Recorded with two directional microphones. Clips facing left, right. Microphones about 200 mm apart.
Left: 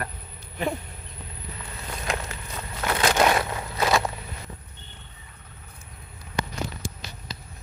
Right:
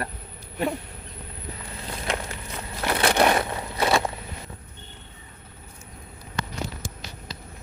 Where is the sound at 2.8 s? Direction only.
30° right (ahead or behind).